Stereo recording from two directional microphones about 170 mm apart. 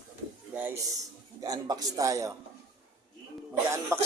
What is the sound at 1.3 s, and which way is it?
A man's voice, 20° right (ahead or behind).